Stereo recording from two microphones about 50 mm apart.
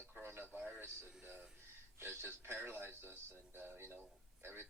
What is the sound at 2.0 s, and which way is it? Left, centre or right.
Speech, right.